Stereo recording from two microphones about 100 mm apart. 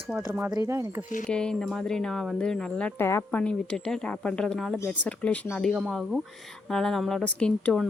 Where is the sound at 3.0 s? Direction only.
25° left (ahead or behind).